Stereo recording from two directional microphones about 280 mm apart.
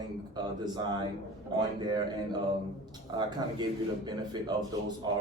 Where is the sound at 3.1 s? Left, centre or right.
Centre.